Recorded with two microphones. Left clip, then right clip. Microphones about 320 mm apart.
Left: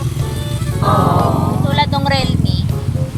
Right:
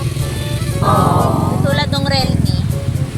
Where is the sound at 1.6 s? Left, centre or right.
Centre.